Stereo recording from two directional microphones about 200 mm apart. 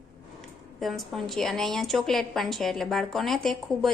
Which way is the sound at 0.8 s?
Centre (ahead or behind).